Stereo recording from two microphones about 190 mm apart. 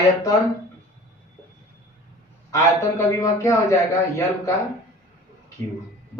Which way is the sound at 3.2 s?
15° left (ahead or behind).